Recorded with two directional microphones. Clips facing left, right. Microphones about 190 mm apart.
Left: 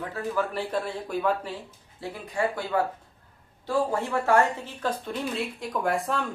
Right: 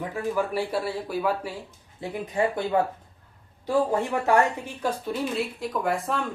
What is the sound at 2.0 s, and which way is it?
Speech, 20° right (ahead or behind).